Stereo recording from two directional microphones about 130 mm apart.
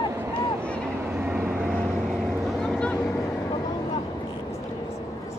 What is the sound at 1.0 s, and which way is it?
Vehicle, 10° right (ahead or behind).